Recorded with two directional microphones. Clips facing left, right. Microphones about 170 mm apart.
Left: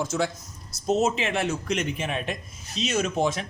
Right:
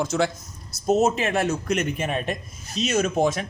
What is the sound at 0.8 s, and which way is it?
Speech, 45° right (ahead or behind).